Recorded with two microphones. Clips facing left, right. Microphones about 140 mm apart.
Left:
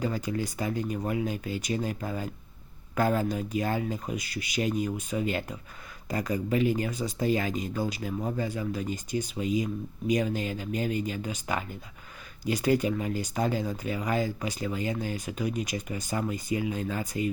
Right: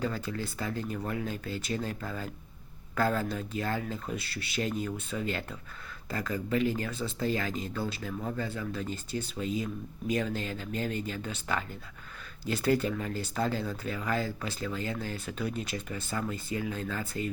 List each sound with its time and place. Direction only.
0.0 s speech: 15° left (ahead or behind)